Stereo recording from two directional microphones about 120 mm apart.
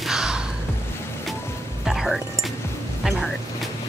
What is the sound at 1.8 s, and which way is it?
Speech, 5° right (ahead or behind).